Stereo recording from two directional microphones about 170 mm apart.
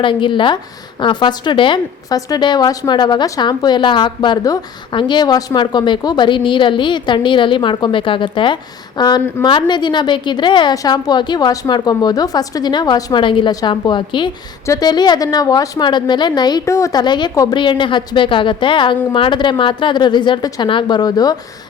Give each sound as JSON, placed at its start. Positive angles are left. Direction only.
{"t": 0.0, "sound": "a woman's voice", "side_deg": 30}